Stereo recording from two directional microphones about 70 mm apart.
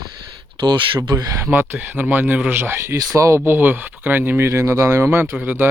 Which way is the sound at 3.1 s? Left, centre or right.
Right.